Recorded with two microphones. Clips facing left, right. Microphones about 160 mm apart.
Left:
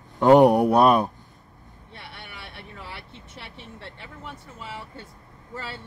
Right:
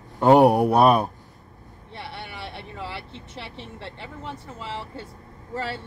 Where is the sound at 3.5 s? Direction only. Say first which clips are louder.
Right 4 dB; 25° right (ahead or behind).